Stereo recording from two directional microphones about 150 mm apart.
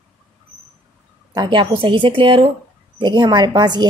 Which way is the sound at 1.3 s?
30° right (ahead or behind).